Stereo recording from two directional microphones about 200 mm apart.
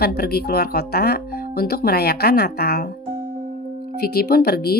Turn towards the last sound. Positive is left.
turn(degrees=50)  # may be behind; listen again after turning